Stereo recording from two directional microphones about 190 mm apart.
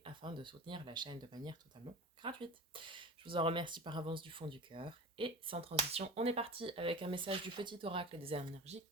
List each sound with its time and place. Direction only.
0.0 s speech: 25° right (ahead or behind)